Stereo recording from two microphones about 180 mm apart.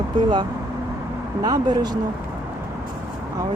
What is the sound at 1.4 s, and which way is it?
Speech, 20° right (ahead or behind).